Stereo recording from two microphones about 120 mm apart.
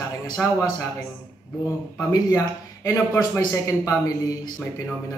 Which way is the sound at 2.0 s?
30° left (ahead or behind).